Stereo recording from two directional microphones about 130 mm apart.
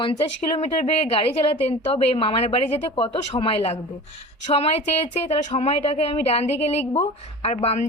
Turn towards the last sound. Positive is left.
turn(degrees=55)  # may be behind; listen again after turning